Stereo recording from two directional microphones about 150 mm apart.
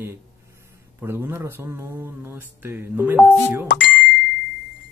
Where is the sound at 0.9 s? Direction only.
15° right (ahead or behind).